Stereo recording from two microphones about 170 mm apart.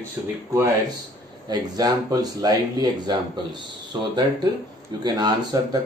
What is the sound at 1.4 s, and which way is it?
Speech, 25° right (ahead or behind).